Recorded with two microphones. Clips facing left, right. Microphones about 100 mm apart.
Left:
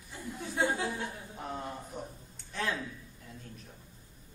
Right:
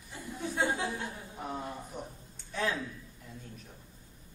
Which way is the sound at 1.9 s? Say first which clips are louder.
Even; 5° left (ahead or behind).